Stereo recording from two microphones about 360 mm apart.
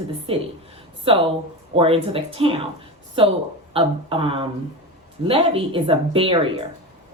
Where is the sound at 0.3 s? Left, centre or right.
Centre.